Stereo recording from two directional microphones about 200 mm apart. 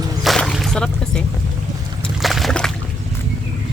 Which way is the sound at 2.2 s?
Centre (ahead or behind).